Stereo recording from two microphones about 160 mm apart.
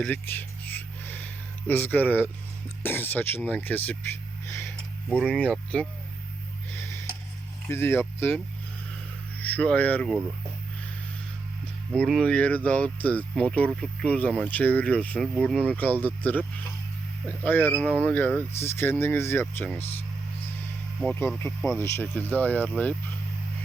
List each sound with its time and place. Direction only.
0.0 s a sound: 10° left (ahead or behind)
2.8 s speech: 10° left (ahead or behind)
4.4 s a sound: 20° left (ahead or behind)
5.0 s speech: 5° left (ahead or behind)
6.7 s a sound: 15° left (ahead or behind)
7.7 s speech: 15° left (ahead or behind)
9.4 s speech: 10° left (ahead or behind)
11.9 s speech: centre (ahead or behind)
21.3 s speech: 15° left (ahead or behind)